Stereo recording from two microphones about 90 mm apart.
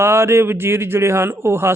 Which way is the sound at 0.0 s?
30° right (ahead or behind).